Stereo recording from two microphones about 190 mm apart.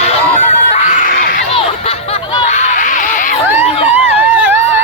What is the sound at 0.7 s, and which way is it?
Crowd, 40° left (ahead or behind).